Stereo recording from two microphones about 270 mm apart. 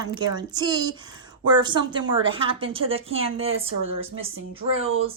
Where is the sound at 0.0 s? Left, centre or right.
Centre.